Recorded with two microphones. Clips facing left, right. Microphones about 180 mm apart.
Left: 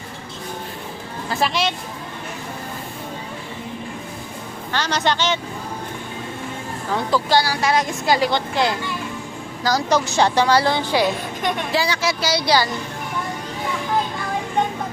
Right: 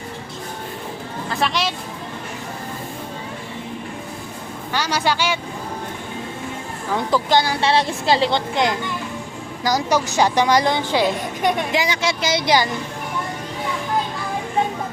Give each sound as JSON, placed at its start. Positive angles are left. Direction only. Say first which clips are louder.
{"t": 1.4, "sound": "speech", "louder": "left 1 dB", "side_deg": 0}
{"t": 4.7, "sound": "speech", "louder": "even", "side_deg": -10}
{"t": 6.9, "sound": "speech", "louder": "right 1 dB", "side_deg": -20}